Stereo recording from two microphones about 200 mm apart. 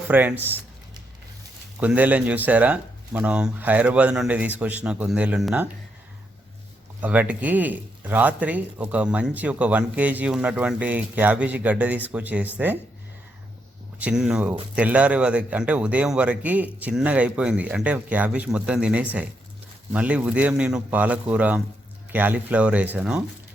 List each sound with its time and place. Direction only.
0.1 s speech: 10° right (ahead or behind)
1.8 s speech: 10° right (ahead or behind)
7.0 s speech: 5° right (ahead or behind)
14.0 s speech: 5° right (ahead or behind)